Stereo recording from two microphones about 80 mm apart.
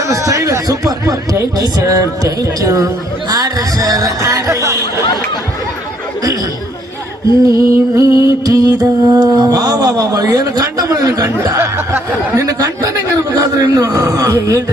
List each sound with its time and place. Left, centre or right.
0.0 s music: right
5.0 s speech: left
7.4 s music: right
12.4 s music: right